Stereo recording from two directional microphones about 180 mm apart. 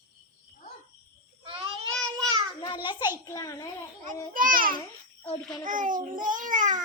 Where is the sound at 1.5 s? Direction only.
30° right (ahead or behind).